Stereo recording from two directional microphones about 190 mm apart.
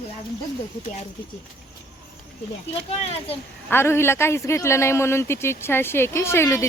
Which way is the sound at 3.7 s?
10° left (ahead or behind).